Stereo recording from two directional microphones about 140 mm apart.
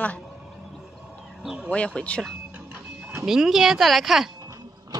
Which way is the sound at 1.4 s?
5° right (ahead or behind).